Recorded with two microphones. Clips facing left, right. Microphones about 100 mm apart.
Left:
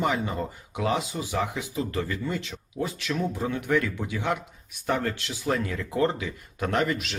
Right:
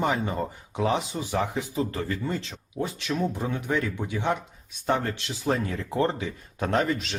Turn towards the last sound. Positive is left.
turn(degrees=-30)  # may be behind; listen again after turning